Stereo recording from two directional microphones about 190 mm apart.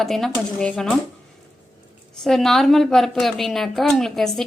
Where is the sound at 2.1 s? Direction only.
Centre (ahead or behind).